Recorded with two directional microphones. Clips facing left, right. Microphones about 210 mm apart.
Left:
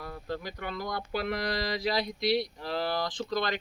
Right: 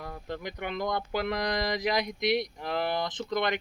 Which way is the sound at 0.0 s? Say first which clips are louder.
Even; 20° right (ahead or behind).